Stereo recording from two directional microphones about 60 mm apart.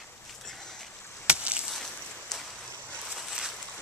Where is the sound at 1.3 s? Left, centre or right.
Centre.